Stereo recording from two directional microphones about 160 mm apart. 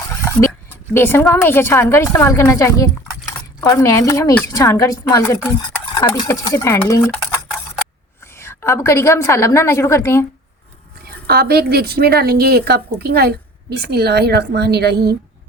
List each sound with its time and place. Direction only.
0.3 s a sound: 15° left (ahead or behind)
0.9 s a woman's voice: 15° left (ahead or behind)
8.2 s a woman's voice: 15° left (ahead or behind)
11.3 s a woman's voice: 80° right